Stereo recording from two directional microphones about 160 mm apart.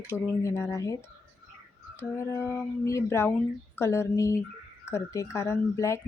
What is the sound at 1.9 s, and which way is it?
Speech, 15° left (ahead or behind).